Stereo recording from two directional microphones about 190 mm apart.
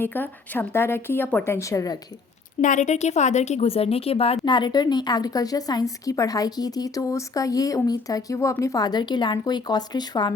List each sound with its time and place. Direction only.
0.0 s a woman's voice: 10° left (ahead or behind)
2.6 s a woman's voice: 40° left (ahead or behind); by 10.3 s 20° left (ahead or behind)